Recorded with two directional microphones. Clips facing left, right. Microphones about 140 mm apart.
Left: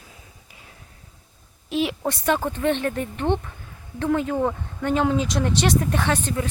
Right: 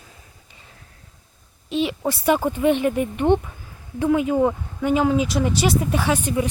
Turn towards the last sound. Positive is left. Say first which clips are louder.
# right 2 dB
turn(degrees=-10)  # may be behind; listen again after turning